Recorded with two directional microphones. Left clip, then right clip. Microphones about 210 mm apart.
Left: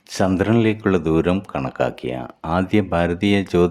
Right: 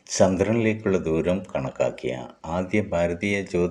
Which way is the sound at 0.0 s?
20° left (ahead or behind).